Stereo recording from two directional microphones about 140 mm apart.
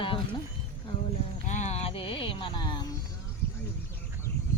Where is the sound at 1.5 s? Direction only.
55° left (ahead or behind); by 2.9 s 30° left (ahead or behind).